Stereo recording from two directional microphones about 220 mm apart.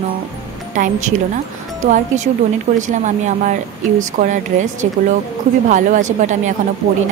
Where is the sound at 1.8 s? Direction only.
35° right (ahead or behind).